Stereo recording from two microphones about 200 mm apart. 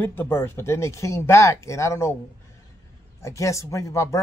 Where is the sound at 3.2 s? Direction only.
15° left (ahead or behind).